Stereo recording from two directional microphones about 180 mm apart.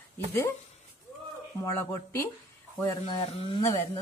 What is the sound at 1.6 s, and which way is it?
Speech, 15° left (ahead or behind).